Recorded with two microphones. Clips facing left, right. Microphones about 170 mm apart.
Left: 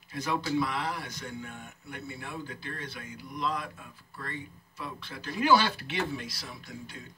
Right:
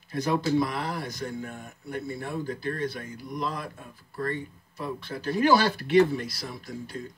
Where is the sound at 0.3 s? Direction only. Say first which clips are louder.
Right 4 dB; 45° right (ahead or behind).